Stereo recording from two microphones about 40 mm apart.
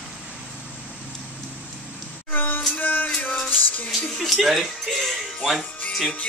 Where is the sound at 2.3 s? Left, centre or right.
Left.